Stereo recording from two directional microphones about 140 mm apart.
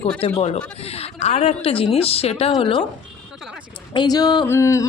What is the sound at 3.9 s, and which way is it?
Speech, 30° left (ahead or behind).